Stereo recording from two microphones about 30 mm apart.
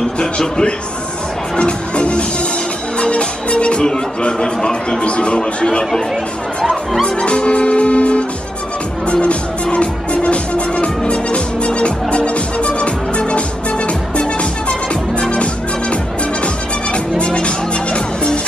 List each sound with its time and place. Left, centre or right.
0.2 s a man's voice: left
1.6 s speech: left
3.0 s music: left
4.2 s speech: left
7.1 s music: left
17.2 s music: left